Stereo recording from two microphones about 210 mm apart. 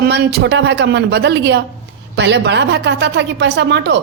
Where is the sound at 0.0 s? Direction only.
50° right (ahead or behind).